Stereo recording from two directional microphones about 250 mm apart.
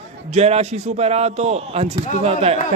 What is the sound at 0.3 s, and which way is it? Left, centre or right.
Speech, right.